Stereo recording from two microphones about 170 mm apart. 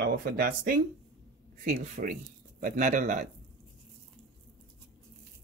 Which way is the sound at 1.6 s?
45° right (ahead or behind).